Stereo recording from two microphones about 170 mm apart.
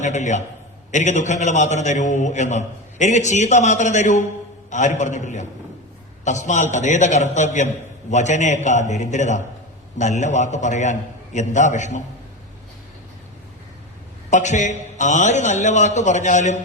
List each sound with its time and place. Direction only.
0.0 s a man's voice: 45° left (ahead or behind)
14.3 s a man's voice: 45° left (ahead or behind)